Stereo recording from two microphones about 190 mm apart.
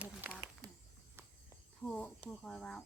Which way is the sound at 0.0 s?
5° right (ahead or behind).